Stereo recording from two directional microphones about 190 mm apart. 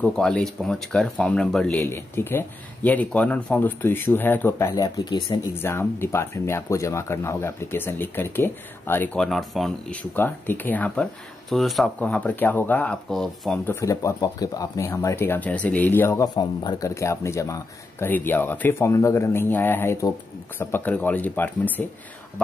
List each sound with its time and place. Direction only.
0.0 s speech: 5° left (ahead or behind)
13.7 s speech: 15° left (ahead or behind)